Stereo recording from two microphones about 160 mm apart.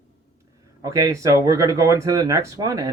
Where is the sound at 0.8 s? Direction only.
20° right (ahead or behind).